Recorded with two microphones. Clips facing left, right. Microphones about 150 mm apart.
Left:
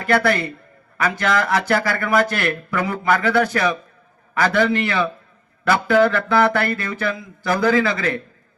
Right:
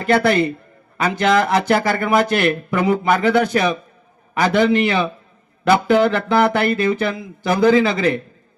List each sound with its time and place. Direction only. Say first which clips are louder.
0.0 s speech: right 3 dB; 20° right (ahead or behind)